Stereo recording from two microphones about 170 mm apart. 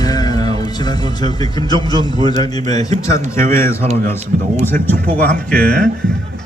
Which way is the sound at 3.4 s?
55° right (ahead or behind).